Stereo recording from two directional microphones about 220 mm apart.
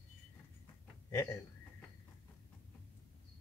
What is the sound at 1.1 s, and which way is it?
Speech, 15° left (ahead or behind).